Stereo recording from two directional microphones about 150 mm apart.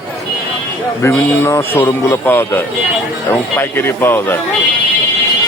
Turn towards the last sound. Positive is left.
turn(degrees=15)  # may be behind; listen again after turning